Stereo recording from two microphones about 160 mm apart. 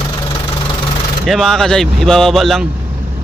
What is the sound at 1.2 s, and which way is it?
Speech, centre (ahead or behind).